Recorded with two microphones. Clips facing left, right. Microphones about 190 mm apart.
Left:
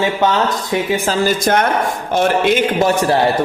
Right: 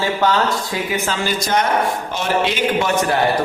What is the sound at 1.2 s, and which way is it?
A man's voice, 55° left (ahead or behind).